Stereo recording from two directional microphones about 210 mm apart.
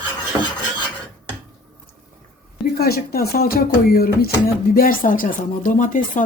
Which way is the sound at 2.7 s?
45° left (ahead or behind).